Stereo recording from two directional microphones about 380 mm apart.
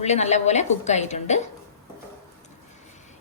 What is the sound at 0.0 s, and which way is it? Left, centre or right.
A woman's voice, centre.